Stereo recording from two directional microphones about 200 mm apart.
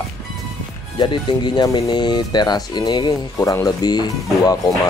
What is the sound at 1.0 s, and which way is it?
Speech, 20° left (ahead or behind).